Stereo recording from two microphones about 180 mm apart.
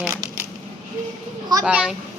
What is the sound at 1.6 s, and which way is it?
Speech, 5° right (ahead or behind).